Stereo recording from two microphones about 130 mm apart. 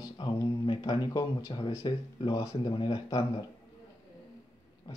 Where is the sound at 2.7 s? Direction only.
45° left (ahead or behind).